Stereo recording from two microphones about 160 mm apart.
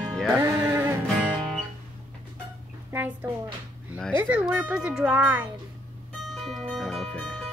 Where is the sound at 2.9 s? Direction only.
10° right (ahead or behind).